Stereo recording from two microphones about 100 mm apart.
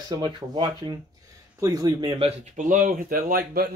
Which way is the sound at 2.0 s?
65° right (ahead or behind).